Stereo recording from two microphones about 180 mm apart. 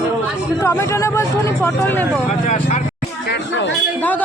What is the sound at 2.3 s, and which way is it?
Speech, 40° left (ahead or behind).